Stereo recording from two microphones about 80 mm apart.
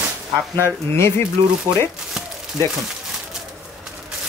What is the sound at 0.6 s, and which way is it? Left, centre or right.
Speech, left.